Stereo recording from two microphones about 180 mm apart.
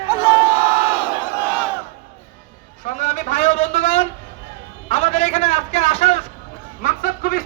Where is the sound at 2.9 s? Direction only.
45° left (ahead or behind).